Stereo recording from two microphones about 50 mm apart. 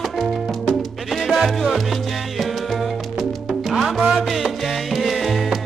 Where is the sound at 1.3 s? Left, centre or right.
Centre.